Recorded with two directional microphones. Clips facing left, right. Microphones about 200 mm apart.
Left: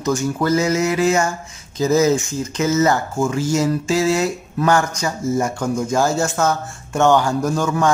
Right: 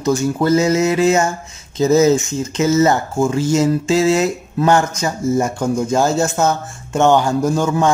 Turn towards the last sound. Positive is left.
turn(degrees=-25)  # may be behind; listen again after turning